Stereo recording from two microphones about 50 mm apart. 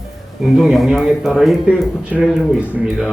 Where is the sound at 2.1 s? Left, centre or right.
Right.